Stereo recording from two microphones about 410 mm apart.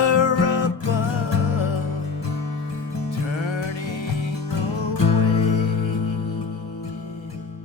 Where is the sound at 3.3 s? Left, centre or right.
Left.